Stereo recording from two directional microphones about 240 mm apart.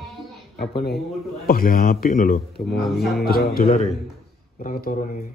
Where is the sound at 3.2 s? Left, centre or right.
Left.